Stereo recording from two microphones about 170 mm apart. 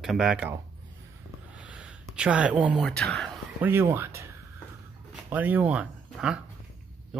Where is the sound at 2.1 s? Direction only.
5° right (ahead or behind).